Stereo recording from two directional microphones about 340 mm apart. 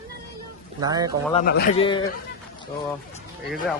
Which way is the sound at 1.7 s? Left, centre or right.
Centre.